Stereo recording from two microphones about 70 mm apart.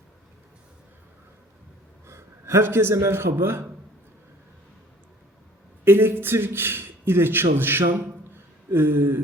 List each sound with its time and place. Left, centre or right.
2.0 s a man's voice: right
5.8 s a man's voice: right